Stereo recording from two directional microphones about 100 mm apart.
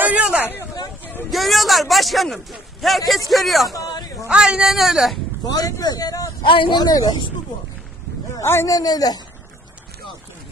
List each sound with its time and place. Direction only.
0.0 s hubbub: 10° right (ahead or behind)
1.3 s a man's voice: centre (ahead or behind)
3.7 s a sound: 40° left (ahead or behind)
4.3 s a man's voice: 10° right (ahead or behind)
5.5 s speech: 35° left (ahead or behind)
6.4 s speech: 55° left (ahead or behind)
6.8 s speech: 40° left (ahead or behind)
8.4 s a man's voice: 30° left (ahead or behind)